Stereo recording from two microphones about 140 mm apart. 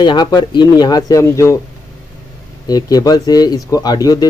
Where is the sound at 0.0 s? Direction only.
30° left (ahead or behind).